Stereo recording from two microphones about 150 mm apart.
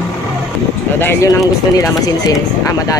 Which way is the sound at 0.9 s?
15° left (ahead or behind).